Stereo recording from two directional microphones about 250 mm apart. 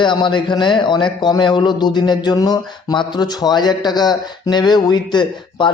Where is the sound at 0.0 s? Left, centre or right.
Centre.